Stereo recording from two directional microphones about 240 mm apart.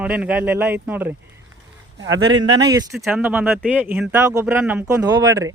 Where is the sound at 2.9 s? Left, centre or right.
Centre.